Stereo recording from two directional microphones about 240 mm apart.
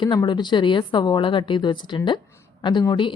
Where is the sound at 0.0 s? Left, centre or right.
Centre.